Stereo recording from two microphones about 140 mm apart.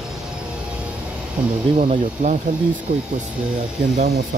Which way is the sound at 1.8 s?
65° right (ahead or behind).